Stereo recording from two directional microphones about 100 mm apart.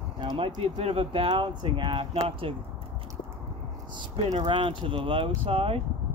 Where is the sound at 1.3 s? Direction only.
50° right (ahead or behind).